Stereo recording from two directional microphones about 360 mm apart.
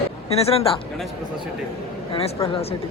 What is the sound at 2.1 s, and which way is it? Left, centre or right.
Speech, centre.